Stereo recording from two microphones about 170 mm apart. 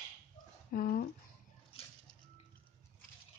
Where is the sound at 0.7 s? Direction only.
55° left (ahead or behind).